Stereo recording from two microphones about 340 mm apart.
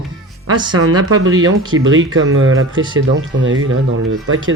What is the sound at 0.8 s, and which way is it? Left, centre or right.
Speech, right.